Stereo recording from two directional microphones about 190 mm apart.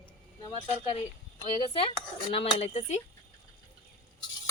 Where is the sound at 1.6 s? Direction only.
30° left (ahead or behind).